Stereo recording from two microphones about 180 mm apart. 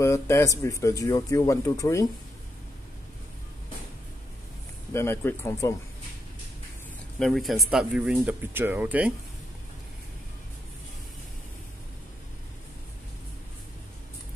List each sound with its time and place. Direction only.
0.0 s speech: 15° left (ahead or behind)
4.9 s speech: 15° left (ahead or behind)
7.2 s speech: centre (ahead or behind)